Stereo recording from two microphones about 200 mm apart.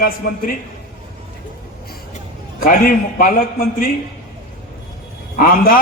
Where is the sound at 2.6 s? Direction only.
45° left (ahead or behind).